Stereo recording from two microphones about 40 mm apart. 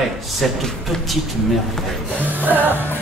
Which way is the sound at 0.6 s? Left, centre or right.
Centre.